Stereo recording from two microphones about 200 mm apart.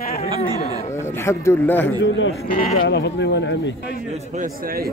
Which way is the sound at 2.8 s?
60° left (ahead or behind).